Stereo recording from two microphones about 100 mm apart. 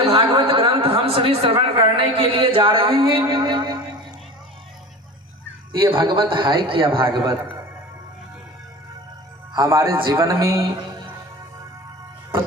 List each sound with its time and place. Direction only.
0.0 s a man's voice: 65° right (ahead or behind)
5.9 s a man's voice: 60° right (ahead or behind)
9.6 s speech: 30° right (ahead or behind)
9.9 s a man's voice: 55° right (ahead or behind)
10.2 s speech: 30° right (ahead or behind)